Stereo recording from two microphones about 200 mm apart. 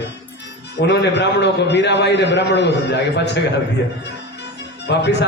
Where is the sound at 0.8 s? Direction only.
60° left (ahead or behind).